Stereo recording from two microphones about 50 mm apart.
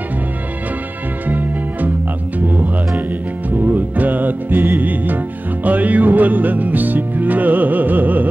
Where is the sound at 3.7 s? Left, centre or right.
Right.